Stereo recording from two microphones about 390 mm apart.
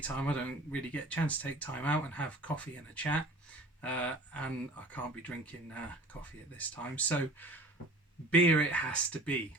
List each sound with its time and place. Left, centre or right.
0.0 s speech: centre
6.6 s speech: centre